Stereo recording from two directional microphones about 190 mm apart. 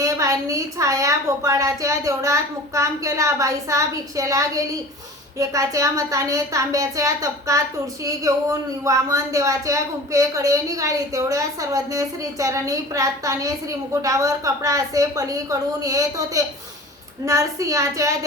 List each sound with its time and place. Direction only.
0.0 s a woman's voice: 15° right (ahead or behind)
8.8 s a woman's voice: 15° right (ahead or behind)